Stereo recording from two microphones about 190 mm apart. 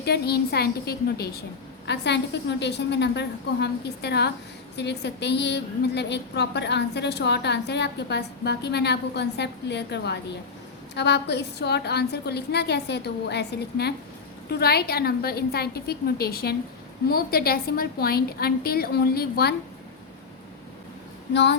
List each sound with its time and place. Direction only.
0.0 s a woman's voice: 60° left (ahead or behind)
1.9 s a woman's voice: 65° left (ahead or behind)